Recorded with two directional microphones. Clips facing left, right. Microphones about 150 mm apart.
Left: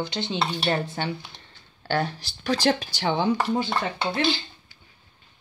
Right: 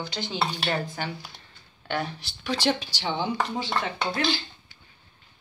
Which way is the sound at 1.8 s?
40° left (ahead or behind).